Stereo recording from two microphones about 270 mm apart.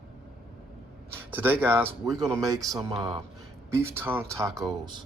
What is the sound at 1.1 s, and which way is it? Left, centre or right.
Speech, centre.